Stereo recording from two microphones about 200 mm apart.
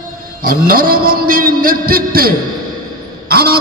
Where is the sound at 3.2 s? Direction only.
50° right (ahead or behind).